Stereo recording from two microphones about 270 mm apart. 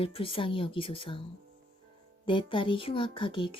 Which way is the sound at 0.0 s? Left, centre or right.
Centre.